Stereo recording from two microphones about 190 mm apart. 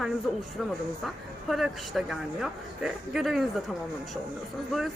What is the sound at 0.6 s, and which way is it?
Speech, centre (ahead or behind).